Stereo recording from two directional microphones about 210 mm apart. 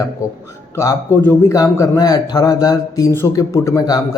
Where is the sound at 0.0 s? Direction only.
15° left (ahead or behind).